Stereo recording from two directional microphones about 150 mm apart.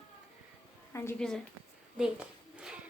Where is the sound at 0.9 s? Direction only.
15° left (ahead or behind).